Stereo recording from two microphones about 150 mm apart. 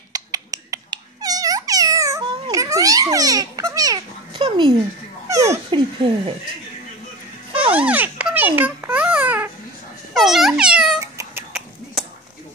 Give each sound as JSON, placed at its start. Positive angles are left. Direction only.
{"t": 0.1, "sound": "a sound", "side_deg": -25}
{"t": 2.5, "sound": "a child's voice", "side_deg": -25}
{"t": 5.3, "sound": "speech", "side_deg": -20}
{"t": 5.7, "sound": "speech", "side_deg": -35}
{"t": 7.7, "sound": "babbling", "side_deg": -10}
{"t": 10.1, "sound": "speech", "side_deg": 0}
{"t": 11.0, "sound": "cat", "side_deg": -20}
{"t": 12.0, "sound": "a sound", "side_deg": 0}